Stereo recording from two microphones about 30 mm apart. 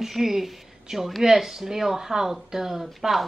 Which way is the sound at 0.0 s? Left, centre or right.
Centre.